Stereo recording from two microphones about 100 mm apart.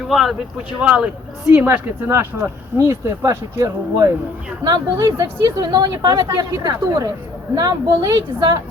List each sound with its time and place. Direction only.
0.1 s speech: centre (ahead or behind)
0.8 s speech: 15° right (ahead or behind); by 4.1 s 35° right (ahead or behind)
4.6 s speech: 45° right (ahead or behind)
5.0 s speech: 35° right (ahead or behind)
5.4 s speech: 45° right (ahead or behind)